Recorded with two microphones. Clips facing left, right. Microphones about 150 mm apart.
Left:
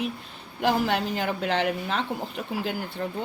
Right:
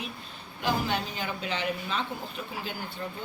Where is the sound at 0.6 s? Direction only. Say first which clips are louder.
Left 5 dB; 75° left (ahead or behind).